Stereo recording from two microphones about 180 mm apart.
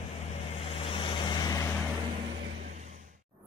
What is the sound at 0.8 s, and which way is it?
Vehicle, 30° left (ahead or behind).